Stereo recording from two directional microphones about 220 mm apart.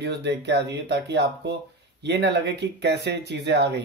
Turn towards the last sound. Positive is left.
turn(degrees=-50)  # may be behind; listen again after turning